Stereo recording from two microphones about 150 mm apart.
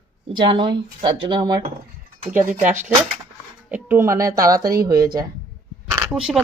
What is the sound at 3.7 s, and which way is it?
Speech, 10° right (ahead or behind).